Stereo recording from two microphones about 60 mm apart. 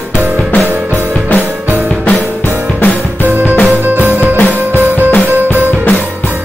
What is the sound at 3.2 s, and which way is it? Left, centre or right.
Music, right.